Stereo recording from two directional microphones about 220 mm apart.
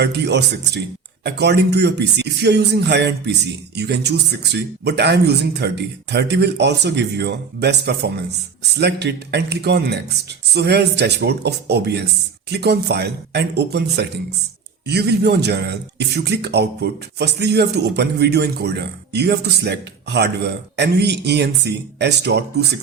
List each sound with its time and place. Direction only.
0.0 s a man's voice: 50° right (ahead or behind)